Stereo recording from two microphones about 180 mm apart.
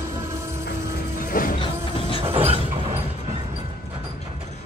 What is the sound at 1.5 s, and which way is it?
Train, 30° left (ahead or behind).